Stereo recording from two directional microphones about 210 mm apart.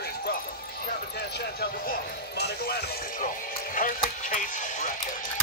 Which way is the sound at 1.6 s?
50° left (ahead or behind).